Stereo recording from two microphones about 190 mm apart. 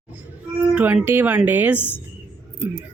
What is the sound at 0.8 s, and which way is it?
A woman's voice, 10° right (ahead or behind).